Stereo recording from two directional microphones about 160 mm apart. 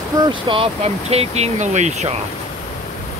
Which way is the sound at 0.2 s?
30° right (ahead or behind).